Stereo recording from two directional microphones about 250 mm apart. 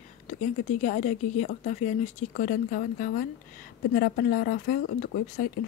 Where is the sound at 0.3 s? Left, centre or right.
Left.